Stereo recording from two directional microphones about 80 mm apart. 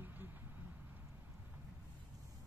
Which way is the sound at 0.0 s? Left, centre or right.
Right.